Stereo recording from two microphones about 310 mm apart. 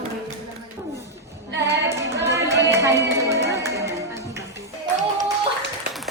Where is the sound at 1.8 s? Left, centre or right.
Centre.